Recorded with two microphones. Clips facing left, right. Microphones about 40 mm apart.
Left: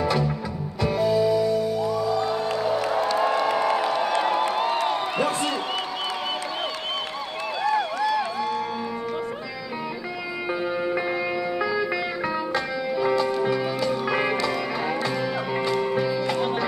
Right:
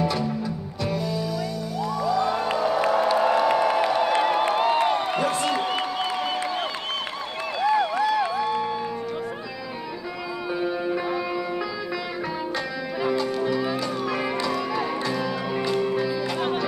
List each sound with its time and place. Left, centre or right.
0.8 s music: left
2.9 s music: centre
4.2 s a sound: centre
7.6 s music: centre
10.6 s music: centre
13.2 s music: centre